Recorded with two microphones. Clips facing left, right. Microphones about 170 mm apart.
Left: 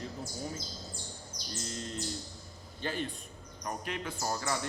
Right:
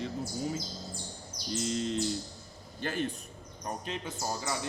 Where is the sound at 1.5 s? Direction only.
90° right.